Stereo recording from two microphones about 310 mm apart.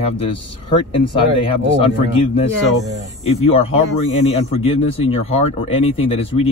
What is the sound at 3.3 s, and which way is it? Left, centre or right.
Speech, centre.